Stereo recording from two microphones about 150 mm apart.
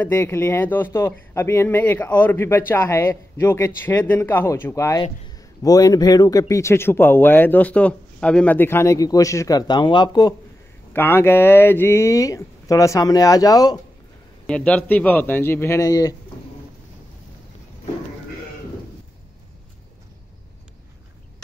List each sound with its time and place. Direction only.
0.0 s speech: 15° left (ahead or behind)
10.9 s speech: 15° left (ahead or behind)
14.4 s speech: 5° left (ahead or behind); by 16.2 s 20° left (ahead or behind)